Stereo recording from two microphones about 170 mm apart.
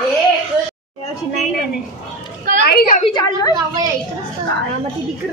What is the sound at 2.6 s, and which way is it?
Speech, 65° left (ahead or behind).